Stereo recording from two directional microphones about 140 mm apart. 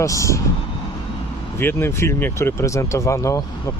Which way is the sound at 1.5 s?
15° left (ahead or behind).